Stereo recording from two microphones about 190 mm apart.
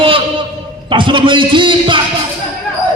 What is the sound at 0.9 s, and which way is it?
A man's voice, 25° right (ahead or behind).